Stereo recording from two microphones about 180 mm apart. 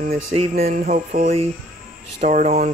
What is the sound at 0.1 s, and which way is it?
Speech, 35° right (ahead or behind).